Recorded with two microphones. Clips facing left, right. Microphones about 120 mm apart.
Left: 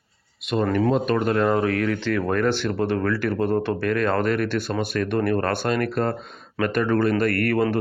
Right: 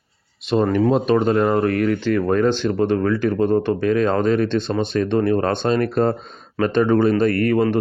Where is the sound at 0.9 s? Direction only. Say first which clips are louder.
Right 4 dB; 30° right (ahead or behind).